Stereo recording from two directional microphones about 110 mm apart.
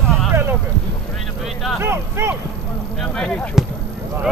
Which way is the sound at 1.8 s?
25° right (ahead or behind).